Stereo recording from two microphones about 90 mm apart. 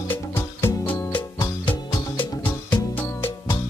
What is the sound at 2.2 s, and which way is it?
Music, 60° left (ahead or behind).